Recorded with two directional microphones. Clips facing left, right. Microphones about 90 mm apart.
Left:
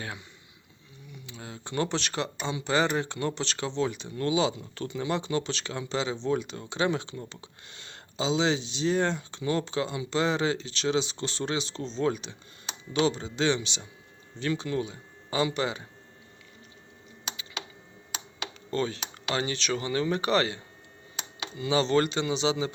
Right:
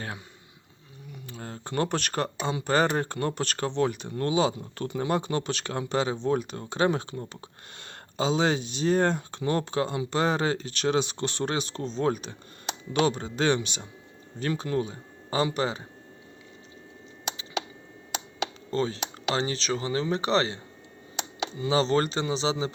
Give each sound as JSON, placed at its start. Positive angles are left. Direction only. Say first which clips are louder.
{"t": 1.3, "sound": "speech", "louder": "right 2 dB", "side_deg": -45}
{"t": 18.7, "sound": "speech", "louder": "even", "side_deg": -30}
{"t": 21.6, "sound": "speech", "louder": "even", "side_deg": -35}